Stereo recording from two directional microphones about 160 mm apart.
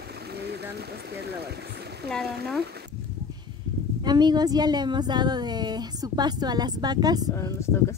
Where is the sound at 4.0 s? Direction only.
25° right (ahead or behind).